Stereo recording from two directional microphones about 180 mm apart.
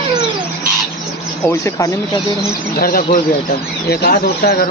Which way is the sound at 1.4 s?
15° left (ahead or behind).